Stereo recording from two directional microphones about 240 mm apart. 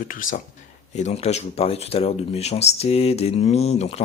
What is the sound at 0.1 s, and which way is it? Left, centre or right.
Speech, left.